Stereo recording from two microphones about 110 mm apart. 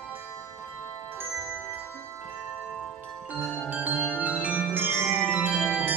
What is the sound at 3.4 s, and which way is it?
Marimba, 20° left (ahead or behind).